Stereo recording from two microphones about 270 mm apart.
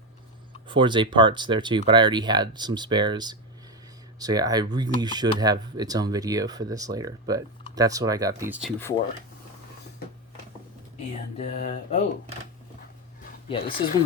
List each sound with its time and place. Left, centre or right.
0.7 s speech: centre
11.3 s mantra: left
13.5 s mantra: centre